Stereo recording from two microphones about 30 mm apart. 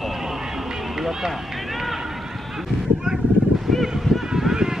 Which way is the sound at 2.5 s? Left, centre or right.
Centre.